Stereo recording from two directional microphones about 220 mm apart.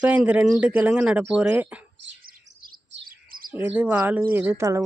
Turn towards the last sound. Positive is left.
turn(degrees=-15)  # may be behind; listen again after turning